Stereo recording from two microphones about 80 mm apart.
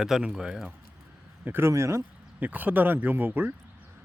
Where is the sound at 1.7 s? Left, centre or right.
Right.